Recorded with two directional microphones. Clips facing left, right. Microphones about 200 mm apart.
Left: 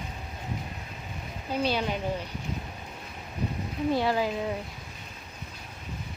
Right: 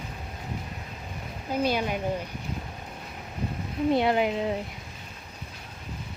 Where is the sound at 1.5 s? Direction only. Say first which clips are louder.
Right 2 dB; 10° right (ahead or behind).